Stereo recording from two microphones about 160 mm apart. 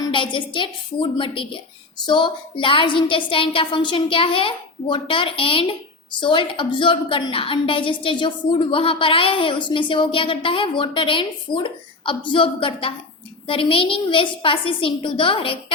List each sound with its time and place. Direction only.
0.0 s a woman's voice: 30° left (ahead or behind)